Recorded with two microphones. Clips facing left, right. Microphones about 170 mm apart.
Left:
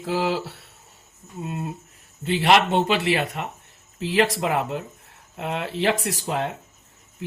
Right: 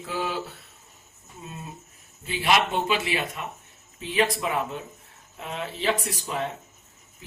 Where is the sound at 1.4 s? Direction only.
70° left (ahead or behind).